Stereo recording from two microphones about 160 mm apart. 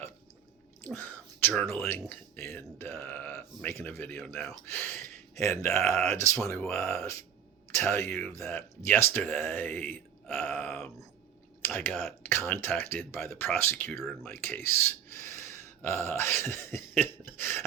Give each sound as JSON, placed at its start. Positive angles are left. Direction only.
{"t": 0.9, "sound": "speech", "side_deg": 10}
{"t": 15.2, "sound": "throat clearing", "side_deg": 15}